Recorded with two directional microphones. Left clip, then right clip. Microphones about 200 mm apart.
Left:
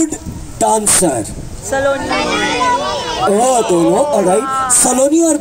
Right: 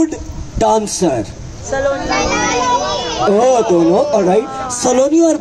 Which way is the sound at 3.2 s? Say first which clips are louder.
Right 1 dB; 40° left (ahead or behind).